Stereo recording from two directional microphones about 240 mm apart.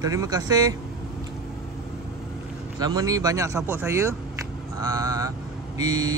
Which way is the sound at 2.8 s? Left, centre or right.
Centre.